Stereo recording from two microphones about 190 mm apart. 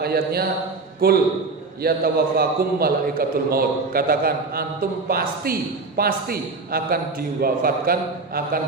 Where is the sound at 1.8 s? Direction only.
55° right (ahead or behind).